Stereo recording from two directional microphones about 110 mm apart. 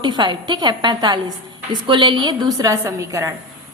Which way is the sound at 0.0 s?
45° right (ahead or behind).